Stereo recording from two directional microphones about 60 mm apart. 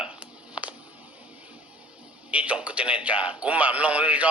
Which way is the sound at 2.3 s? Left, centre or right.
Right.